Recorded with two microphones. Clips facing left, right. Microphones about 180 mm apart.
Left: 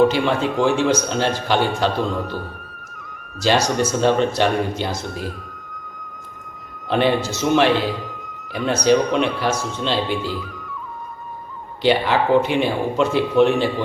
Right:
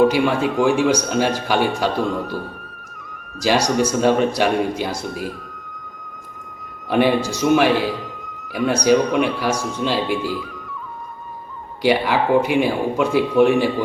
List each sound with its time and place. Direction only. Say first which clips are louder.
0.0 s a man's voice: right 1 dB; 10° right (ahead or behind)
3.4 s a man's voice: right 1 dB; 10° right (ahead or behind)
6.9 s a man's voice: right 1 dB; 10° right (ahead or behind)
11.8 s a man's voice: even; 10° right (ahead or behind)